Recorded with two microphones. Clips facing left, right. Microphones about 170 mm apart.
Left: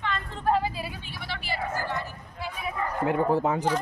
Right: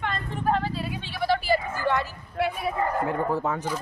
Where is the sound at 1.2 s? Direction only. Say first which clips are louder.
Right 12 dB; 40° right (ahead or behind).